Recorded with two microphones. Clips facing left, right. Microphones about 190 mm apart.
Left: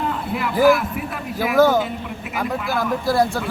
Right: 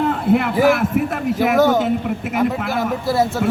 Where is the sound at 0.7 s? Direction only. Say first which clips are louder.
Right 2 dB; 55° right (ahead or behind).